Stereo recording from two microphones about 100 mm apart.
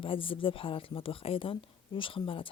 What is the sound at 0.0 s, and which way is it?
Speech, 60° left (ahead or behind).